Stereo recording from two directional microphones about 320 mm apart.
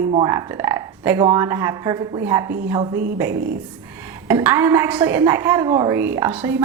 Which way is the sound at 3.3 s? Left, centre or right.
Right.